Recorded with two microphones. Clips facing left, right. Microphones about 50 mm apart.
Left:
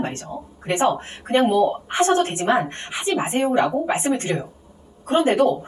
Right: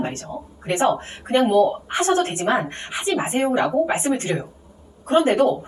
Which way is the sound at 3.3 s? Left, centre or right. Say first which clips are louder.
Right 1 dB; centre.